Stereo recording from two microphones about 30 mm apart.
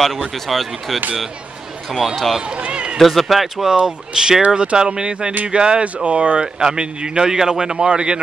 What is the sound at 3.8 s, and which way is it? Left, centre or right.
A man's voice, right.